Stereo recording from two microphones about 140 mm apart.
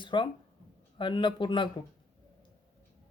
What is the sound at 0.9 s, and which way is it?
Speech, 35° left (ahead or behind).